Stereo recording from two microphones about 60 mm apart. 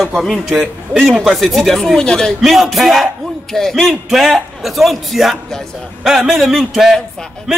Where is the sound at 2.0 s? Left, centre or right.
Centre.